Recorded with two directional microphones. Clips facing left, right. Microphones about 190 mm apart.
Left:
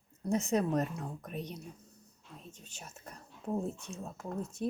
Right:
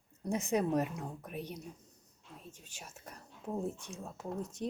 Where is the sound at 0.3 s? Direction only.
15° right (ahead or behind).